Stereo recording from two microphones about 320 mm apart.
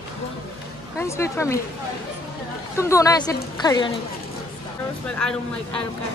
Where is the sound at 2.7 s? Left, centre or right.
Centre.